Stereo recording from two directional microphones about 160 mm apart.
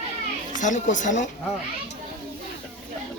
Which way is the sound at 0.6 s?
50° left (ahead or behind).